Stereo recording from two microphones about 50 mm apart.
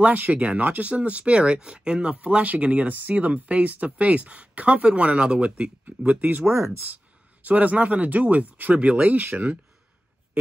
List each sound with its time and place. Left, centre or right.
0.0 s speech: right
5.9 s speech: right
6.5 s speech: right
7.4 s speech: right